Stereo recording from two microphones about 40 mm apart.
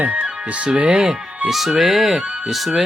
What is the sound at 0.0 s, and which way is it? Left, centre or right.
Speech, right.